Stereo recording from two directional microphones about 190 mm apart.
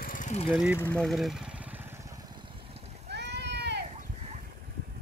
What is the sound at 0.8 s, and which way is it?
Vehicle, 5° left (ahead or behind).